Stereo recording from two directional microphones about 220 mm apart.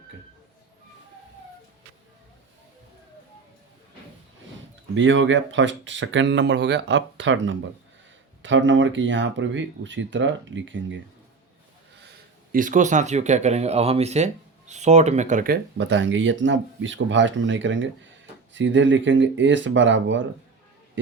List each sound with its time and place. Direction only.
4.9 s speech: 60° right (ahead or behind)
12.0 s speech: 40° right (ahead or behind)
15.8 s speech: 55° right (ahead or behind)